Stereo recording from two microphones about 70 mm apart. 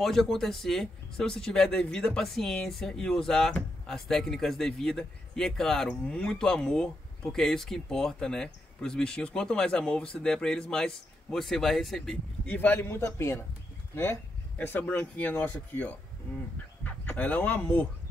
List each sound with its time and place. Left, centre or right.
0.0 s speech: centre
12.4 s a man's voice: left
14.6 s speech: left